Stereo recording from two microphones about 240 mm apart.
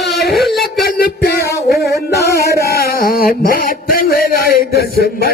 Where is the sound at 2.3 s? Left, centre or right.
Left.